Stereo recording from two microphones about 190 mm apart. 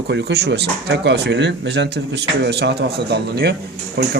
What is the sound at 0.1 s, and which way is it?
Speech, 60° right (ahead or behind).